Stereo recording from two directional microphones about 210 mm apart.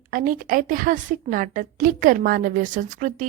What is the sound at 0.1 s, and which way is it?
A woman's voice, 40° right (ahead or behind).